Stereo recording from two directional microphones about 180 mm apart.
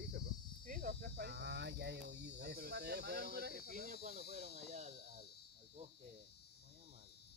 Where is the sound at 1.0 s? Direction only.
60° right (ahead or behind).